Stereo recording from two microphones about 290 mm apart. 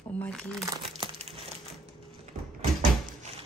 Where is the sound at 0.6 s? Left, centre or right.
Centre.